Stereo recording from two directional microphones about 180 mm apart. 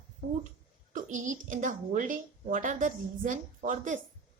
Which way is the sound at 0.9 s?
45° right (ahead or behind).